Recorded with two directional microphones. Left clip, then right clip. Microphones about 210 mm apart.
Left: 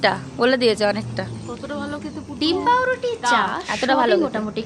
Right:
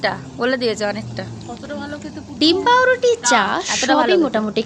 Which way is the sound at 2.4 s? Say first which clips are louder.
Right 4 dB; 20° right (ahead or behind).